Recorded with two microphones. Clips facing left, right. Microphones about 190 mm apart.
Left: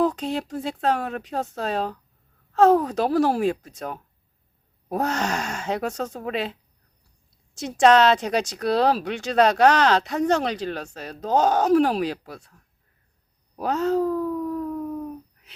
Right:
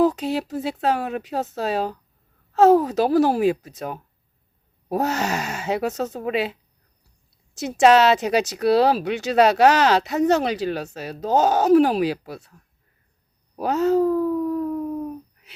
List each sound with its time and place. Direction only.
0.0 s speech: 5° right (ahead or behind)
13.6 s speech: 5° right (ahead or behind)
14.7 s a sound: 20° right (ahead or behind)